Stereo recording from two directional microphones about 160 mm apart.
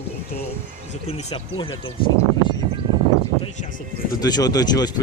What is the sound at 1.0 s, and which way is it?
Speech, 35° left (ahead or behind).